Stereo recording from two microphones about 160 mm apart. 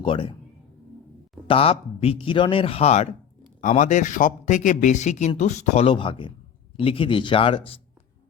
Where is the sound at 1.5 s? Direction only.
35° left (ahead or behind).